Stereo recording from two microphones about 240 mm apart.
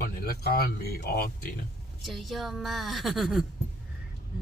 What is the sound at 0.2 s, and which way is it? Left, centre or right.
Speech, left.